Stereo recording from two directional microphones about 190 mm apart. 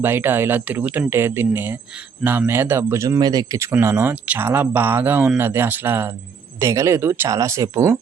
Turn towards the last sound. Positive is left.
turn(degrees=-15)  # may be behind; listen again after turning